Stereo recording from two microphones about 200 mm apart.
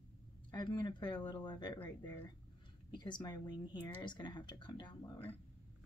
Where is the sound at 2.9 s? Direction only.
20° left (ahead or behind).